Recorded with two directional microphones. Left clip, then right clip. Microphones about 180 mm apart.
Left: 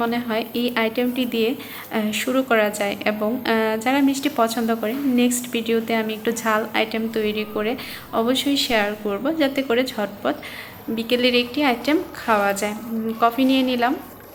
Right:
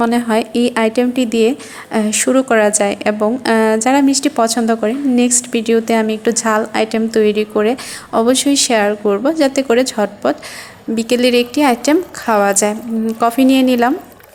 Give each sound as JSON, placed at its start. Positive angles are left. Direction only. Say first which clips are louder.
{"t": 0.0, "sound": "a woman's voice", "louder": "right 8 dB", "side_deg": -50}